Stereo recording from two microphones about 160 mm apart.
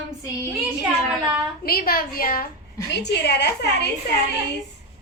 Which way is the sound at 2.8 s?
90° left.